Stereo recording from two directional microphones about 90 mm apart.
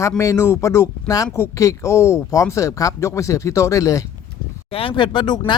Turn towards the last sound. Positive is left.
turn(degrees=60)  # may be behind; listen again after turning